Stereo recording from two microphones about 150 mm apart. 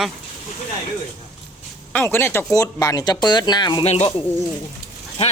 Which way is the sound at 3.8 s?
45° left (ahead or behind).